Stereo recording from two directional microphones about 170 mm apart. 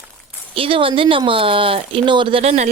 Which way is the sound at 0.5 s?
30° right (ahead or behind).